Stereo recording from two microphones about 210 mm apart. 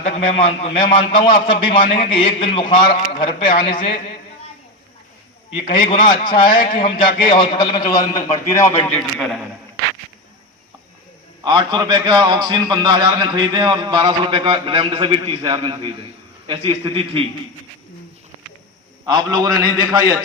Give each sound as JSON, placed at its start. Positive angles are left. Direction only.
{"t": 0.0, "sound": "a man's voice", "side_deg": 30}
{"t": 5.5, "sound": "a man's voice", "side_deg": 25}
{"t": 11.4, "sound": "a man's voice", "side_deg": -20}
{"t": 19.5, "sound": "a man's voice", "side_deg": 90}